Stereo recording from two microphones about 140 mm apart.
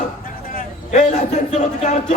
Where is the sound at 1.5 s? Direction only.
55° left (ahead or behind).